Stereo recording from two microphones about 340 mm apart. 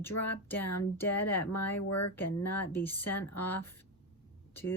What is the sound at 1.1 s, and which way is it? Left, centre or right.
Speech, left.